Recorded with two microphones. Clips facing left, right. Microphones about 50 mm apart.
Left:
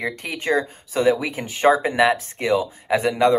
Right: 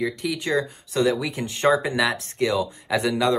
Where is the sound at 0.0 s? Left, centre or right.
Left.